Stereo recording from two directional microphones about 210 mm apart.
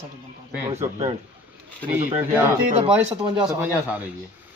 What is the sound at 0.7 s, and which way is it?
Speech, 30° right (ahead or behind).